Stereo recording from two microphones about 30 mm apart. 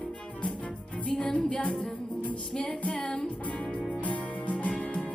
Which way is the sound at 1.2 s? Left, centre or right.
Left.